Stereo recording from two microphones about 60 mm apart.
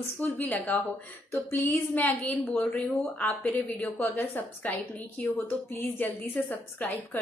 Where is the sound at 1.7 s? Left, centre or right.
Left.